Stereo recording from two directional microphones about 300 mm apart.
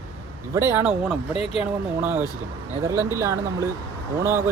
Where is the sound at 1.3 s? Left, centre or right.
Centre.